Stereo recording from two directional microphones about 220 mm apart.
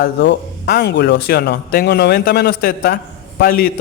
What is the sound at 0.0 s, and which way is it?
A man's voice, 50° left (ahead or behind).